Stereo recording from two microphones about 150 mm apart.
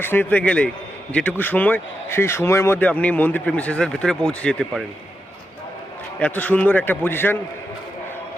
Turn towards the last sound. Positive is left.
turn(degrees=15)  # may be behind; listen again after turning